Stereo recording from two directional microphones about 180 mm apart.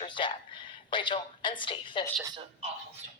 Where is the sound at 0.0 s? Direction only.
25° left (ahead or behind).